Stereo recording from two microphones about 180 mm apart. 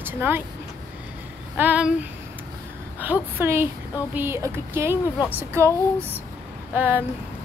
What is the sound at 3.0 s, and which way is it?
Speech, 10° right (ahead or behind).